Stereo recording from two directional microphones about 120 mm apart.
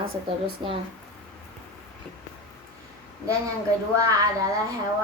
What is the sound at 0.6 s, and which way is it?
Speech, 50° right (ahead or behind).